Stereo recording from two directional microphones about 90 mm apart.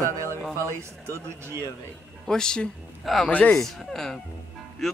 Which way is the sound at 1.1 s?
30° right (ahead or behind).